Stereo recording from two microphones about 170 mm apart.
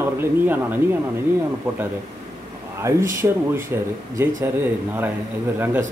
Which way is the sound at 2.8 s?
15° right (ahead or behind).